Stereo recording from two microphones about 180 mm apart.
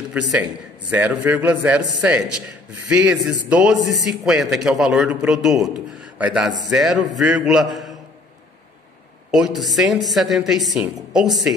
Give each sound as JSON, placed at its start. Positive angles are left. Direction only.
{"t": 0.3, "sound": "a man's voice", "side_deg": -10}
{"t": 3.8, "sound": "a man's voice", "side_deg": -20}
{"t": 4.2, "sound": "a man's voice", "side_deg": 0}
{"t": 9.3, "sound": "a man's voice", "side_deg": 0}